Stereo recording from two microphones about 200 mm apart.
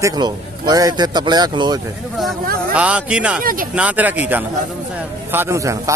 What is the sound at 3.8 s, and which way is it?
A man's voice, 5° right (ahead or behind).